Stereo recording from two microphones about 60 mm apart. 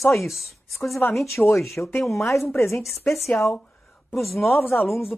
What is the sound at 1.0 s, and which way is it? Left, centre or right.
Speech, left.